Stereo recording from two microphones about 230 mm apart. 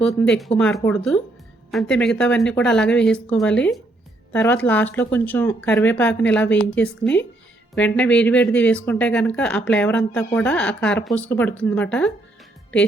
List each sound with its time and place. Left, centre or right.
0.3 s speech: centre